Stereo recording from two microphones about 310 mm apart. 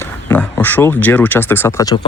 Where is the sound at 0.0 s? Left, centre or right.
Centre.